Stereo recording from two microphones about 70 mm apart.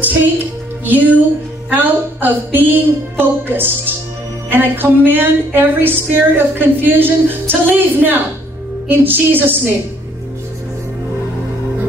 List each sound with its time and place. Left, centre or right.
0.8 s music: right